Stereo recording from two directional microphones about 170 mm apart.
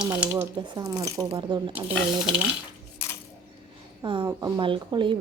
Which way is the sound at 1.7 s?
5° right (ahead or behind).